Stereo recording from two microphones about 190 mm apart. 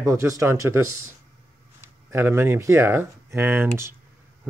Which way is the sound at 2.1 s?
10° right (ahead or behind).